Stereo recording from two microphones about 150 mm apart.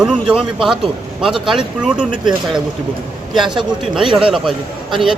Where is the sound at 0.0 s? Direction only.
5° right (ahead or behind).